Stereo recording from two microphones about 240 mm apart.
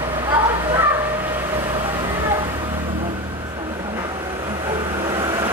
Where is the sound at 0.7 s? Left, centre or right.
Centre.